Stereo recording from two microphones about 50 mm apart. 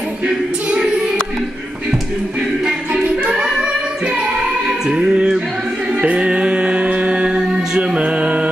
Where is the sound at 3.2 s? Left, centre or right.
Right.